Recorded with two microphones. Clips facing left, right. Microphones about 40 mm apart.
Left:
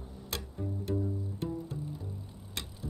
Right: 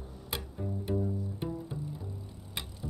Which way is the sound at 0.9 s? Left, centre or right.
Centre.